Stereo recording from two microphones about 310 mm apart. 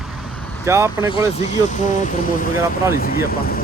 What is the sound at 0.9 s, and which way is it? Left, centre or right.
Speech, centre.